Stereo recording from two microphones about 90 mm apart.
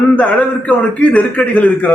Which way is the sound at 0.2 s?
10° left (ahead or behind).